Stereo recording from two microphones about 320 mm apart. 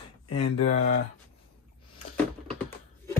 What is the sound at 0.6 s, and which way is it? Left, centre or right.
Speech, left.